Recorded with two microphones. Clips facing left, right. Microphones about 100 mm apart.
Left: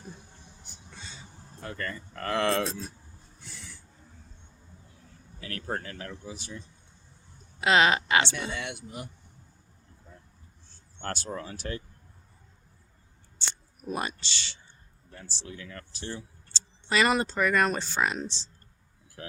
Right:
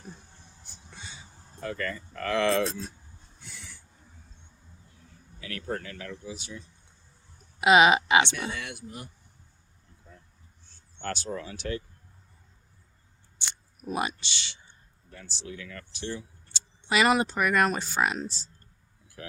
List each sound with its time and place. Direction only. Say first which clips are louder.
1.6 s speech: right 3 dB; 35° left (ahead or behind)
5.4 s speech: even; 45° left (ahead or behind)
7.6 s a woman's voice: right 4 dB; 15° right (ahead or behind)
8.4 s speech: left 1 dB; 25° left (ahead or behind)
11.0 s speech: right 1 dB; 40° left (ahead or behind)
13.4 s camera: left 2 dB; 15° right (ahead or behind)
13.8 s speech: right 2 dB; 5° right (ahead or behind)
14.2 s a woman's voice: even; 15° right (ahead or behind)
15.2 s speech: right 2 dB; 35° left (ahead or behind)
16.5 s speech: right 1 dB; 10° right (ahead or behind)